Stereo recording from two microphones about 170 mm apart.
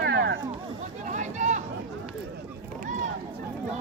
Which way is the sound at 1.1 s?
45° right (ahead or behind).